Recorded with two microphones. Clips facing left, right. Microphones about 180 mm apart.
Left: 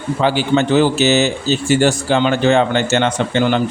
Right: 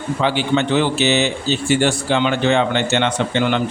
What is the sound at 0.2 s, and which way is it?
Speech, 40° left (ahead or behind).